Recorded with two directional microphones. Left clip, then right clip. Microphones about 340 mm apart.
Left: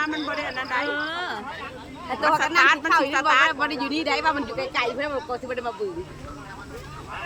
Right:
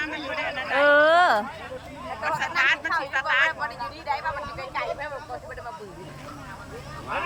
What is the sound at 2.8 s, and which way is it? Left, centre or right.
A man's voice, left.